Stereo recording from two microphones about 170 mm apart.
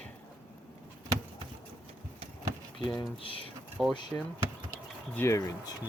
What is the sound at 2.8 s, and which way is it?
Speech, 25° left (ahead or behind).